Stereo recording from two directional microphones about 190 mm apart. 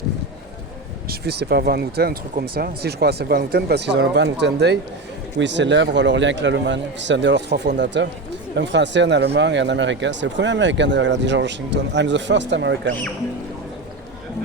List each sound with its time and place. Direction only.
1.1 s speech: 60° right (ahead or behind)